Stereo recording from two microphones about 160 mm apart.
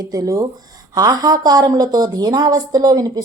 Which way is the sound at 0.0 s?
25° right (ahead or behind).